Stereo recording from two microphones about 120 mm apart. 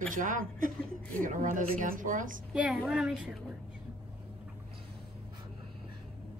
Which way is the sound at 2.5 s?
10° right (ahead or behind).